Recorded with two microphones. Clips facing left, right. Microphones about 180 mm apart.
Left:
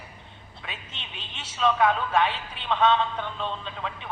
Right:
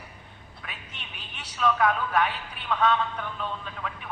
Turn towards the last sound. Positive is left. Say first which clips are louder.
# left 2 dB
turn(degrees=25)  # may be behind; listen again after turning